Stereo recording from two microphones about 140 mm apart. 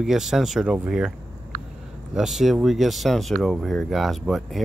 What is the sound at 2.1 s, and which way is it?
Speech, 5° right (ahead or behind).